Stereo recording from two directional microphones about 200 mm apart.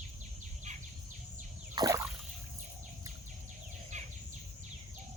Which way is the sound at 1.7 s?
20° right (ahead or behind).